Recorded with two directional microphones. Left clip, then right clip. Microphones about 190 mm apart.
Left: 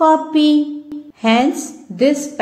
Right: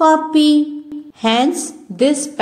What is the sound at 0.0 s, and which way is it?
A woman's voice, 30° right (ahead or behind).